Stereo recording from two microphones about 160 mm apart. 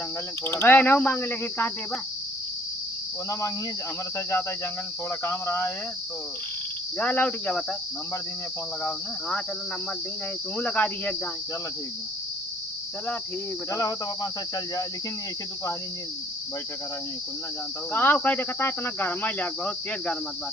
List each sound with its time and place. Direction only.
0.4 s cricket: 15° left (ahead or behind)
4.3 s cricket: 15° left (ahead or behind)
7.0 s cricket: 10° left (ahead or behind)
10.6 s cricket: 10° left (ahead or behind)
13.7 s cricket: 20° left (ahead or behind)
17.9 s cricket: 10° left (ahead or behind)